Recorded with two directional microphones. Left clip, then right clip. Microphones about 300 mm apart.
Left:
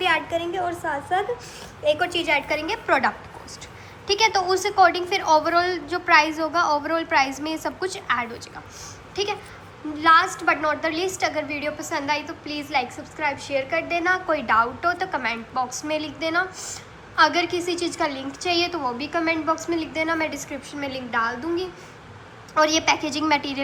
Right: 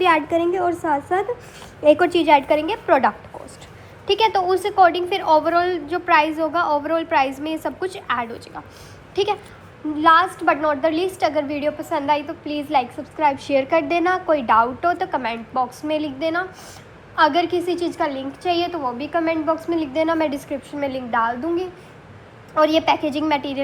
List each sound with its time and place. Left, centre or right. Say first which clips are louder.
0.6 s a woman's voice: right 6 dB; right
2.0 s a woman's voice: right 7 dB; centre
22.5 s a woman's voice: right 3 dB; centre